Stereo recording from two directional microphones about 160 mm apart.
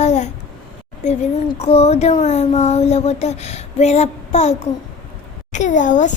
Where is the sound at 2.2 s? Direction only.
45° left (ahead or behind).